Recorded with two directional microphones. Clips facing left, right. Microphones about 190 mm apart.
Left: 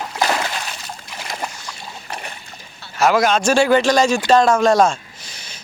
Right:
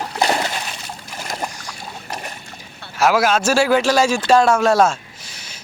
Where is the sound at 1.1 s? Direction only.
45° right (ahead or behind).